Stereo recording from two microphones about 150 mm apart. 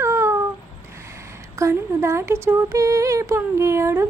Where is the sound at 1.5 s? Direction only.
20° right (ahead or behind).